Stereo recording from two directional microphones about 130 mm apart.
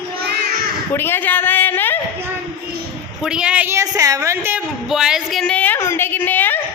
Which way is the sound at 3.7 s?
25° right (ahead or behind).